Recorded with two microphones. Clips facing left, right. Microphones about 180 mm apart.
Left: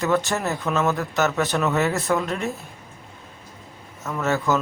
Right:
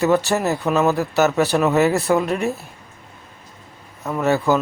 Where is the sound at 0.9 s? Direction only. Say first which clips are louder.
Right 5 dB; 35° right (ahead or behind).